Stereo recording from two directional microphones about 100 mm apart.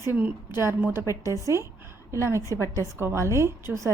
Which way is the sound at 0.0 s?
20° right (ahead or behind).